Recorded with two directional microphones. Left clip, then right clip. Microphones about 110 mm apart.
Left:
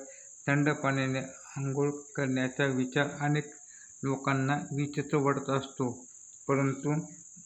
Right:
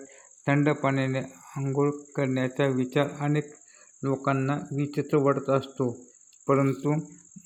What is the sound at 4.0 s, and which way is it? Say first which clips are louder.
Speech: right 4 dB; 20° right (ahead or behind).